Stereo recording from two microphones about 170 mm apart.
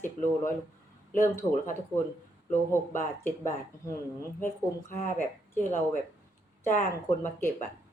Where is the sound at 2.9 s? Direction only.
15° left (ahead or behind).